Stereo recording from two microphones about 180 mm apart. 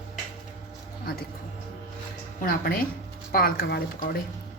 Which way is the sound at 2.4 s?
50° left (ahead or behind).